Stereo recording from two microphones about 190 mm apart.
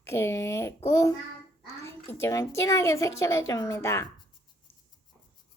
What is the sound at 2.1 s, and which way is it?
A child's voice, 15° left (ahead or behind).